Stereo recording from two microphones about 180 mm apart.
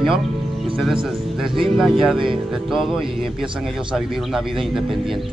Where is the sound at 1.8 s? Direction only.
Centre (ahead or behind).